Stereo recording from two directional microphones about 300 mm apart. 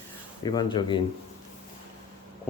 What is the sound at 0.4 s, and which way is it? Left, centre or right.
Speech, centre.